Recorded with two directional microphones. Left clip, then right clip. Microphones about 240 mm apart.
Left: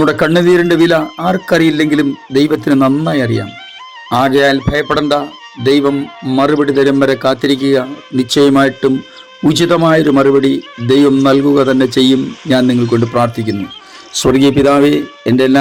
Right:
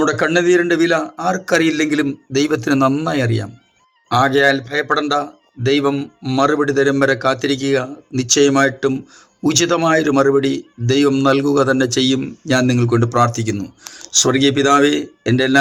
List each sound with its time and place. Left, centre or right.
0.0 s a man's voice: left